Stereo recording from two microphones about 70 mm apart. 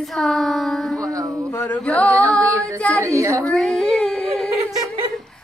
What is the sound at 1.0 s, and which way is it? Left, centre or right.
Music, right.